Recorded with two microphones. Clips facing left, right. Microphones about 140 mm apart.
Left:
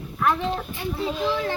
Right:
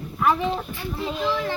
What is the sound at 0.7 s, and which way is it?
Speech, 20° left (ahead or behind).